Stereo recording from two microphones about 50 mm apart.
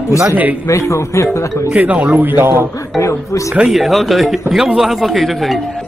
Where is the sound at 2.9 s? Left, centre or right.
Left.